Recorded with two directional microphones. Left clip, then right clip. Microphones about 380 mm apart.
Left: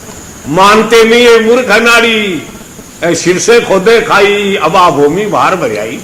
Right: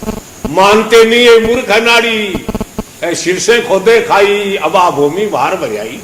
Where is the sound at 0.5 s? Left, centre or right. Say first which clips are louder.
Left 1 dB; left.